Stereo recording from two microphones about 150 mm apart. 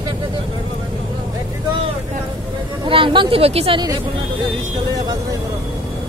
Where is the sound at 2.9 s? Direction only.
35° right (ahead or behind).